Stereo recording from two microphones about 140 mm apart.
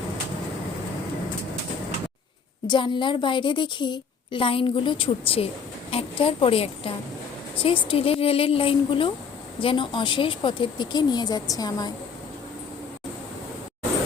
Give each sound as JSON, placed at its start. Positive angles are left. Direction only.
{"t": 2.6, "sound": "a woman's voice", "side_deg": 35}